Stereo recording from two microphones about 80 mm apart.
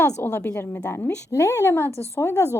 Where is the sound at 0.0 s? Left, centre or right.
Left.